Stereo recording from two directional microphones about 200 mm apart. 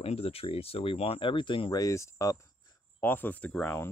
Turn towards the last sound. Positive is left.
turn(degrees=10)  # may be behind; listen again after turning